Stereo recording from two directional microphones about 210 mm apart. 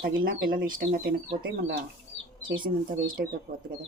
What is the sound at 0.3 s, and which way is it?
Speech, 45° right (ahead or behind).